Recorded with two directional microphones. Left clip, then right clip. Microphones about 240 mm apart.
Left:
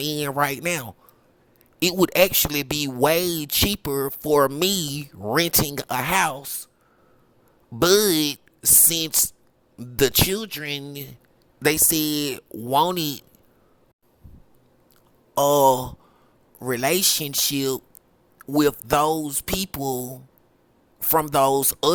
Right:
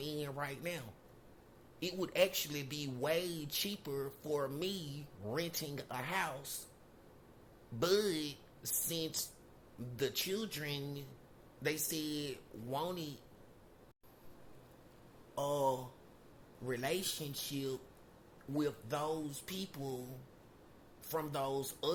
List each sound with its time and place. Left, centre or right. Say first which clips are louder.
0.0 s speech: left 18 dB; left
7.8 s speech: left 16 dB; left
15.4 s speech: left 18 dB; left